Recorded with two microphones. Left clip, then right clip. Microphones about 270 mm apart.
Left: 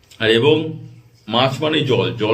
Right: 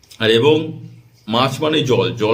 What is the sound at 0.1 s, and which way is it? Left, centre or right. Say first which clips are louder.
A man's voice: right 1 dB; centre.